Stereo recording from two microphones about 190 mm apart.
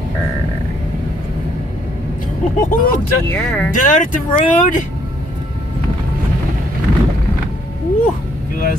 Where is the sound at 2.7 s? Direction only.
45° left (ahead or behind).